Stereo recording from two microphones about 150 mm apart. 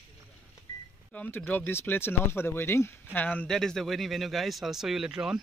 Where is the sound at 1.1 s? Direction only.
10° left (ahead or behind).